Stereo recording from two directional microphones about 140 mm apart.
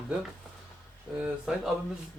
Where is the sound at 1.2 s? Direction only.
5° right (ahead or behind).